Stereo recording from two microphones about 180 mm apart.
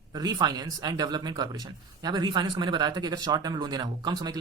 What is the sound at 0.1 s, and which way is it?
Speech, 20° right (ahead or behind).